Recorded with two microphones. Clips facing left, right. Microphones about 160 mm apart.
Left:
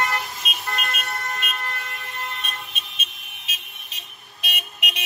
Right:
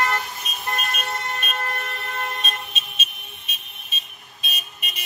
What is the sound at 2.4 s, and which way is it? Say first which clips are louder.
Vehicle: right 4 dB; 65° left (ahead or behind).